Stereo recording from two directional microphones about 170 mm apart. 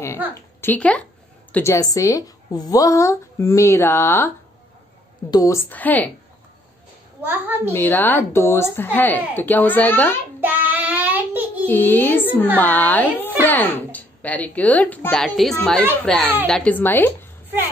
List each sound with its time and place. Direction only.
0.3 s a woman's voice: 10° left (ahead or behind)
5.3 s a woman's voice: 20° left (ahead or behind)
7.2 s a woman's voice: 10° right (ahead or behind)
7.7 s a woman's voice: 10° left (ahead or behind)
10.4 s child singing: 10° right (ahead or behind)
11.6 s a woman's voice: 10° left (ahead or behind)